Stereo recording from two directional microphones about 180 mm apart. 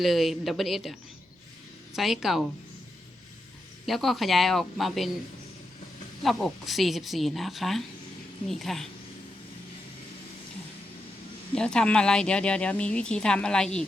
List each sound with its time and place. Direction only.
0.0 s speech: centre (ahead or behind)
3.8 s speech: centre (ahead or behind)
6.2 s speech: centre (ahead or behind)
11.5 s speech: 5° left (ahead or behind)